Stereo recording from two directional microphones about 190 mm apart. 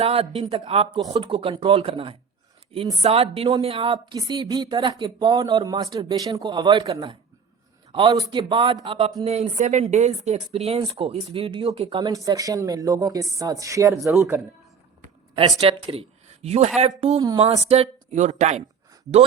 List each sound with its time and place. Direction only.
0.0 s speech: 30° right (ahead or behind); by 14.1 s 15° right (ahead or behind)
15.6 s speech: 30° right (ahead or behind)
17.0 s speech: 25° right (ahead or behind)